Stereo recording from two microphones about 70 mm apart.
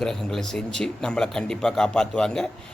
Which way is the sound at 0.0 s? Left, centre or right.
Centre.